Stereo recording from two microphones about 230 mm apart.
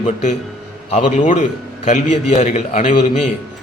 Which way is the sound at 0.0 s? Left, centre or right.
Left.